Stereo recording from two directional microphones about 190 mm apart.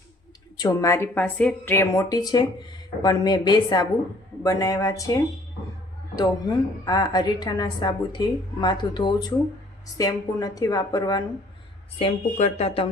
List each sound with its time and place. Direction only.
0.6 s a woman's voice: 15° left (ahead or behind)
6.1 s a woman's voice: 20° left (ahead or behind)
11.9 s speech: 35° left (ahead or behind)